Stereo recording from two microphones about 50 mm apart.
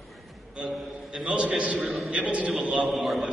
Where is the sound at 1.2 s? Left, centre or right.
Centre.